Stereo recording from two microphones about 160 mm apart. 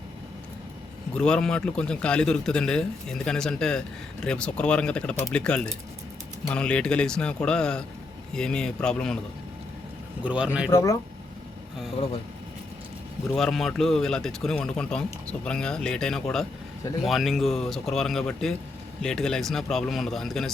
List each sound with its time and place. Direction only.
1.1 s a man's voice: 5° left (ahead or behind)
10.2 s speech: 5° right (ahead or behind)
10.7 s speech: 20° left (ahead or behind)
13.3 s a man's voice: centre (ahead or behind)